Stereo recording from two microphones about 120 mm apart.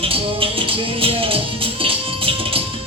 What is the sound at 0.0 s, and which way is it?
Music, 50° right (ahead or behind).